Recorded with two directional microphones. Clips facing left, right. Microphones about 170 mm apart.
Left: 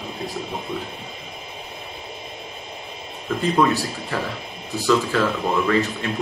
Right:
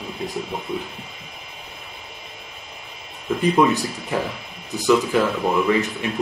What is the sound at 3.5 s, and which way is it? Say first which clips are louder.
Speech: left 1 dB; 20° right (ahead or behind).